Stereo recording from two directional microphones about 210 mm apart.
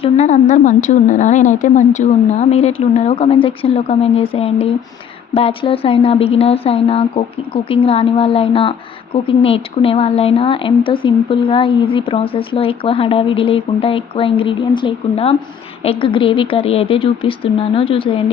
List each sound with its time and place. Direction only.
0.0 s a woman's voice: 35° left (ahead or behind)